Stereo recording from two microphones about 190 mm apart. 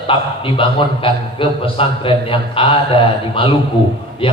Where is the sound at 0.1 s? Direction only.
30° left (ahead or behind).